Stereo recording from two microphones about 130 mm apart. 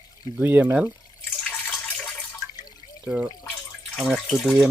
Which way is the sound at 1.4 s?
5° left (ahead or behind).